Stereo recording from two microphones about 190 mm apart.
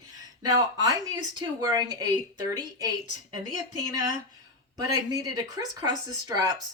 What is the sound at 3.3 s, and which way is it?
Speech, 20° right (ahead or behind).